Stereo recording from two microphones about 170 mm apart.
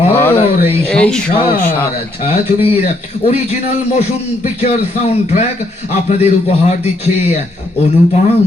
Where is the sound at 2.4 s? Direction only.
35° left (ahead or behind).